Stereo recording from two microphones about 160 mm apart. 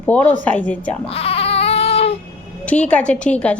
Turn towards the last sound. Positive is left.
turn(degrees=10)  # may be behind; listen again after turning